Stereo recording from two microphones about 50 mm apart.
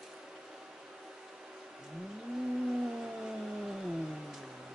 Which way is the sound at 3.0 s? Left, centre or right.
Centre.